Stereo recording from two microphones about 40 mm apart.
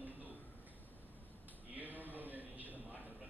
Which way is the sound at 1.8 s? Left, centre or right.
Right.